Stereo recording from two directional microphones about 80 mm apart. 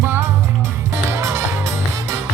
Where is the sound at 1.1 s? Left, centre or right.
Right.